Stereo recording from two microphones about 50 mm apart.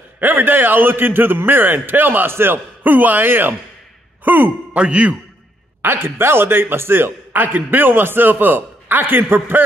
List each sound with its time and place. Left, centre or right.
0.2 s a man's voice: right
4.7 s a man's voice: right
5.8 s a man's voice: right